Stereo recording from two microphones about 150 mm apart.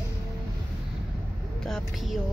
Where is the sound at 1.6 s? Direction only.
Centre (ahead or behind).